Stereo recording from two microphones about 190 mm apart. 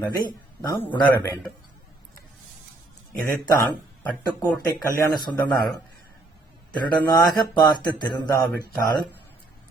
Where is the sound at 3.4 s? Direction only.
15° left (ahead or behind).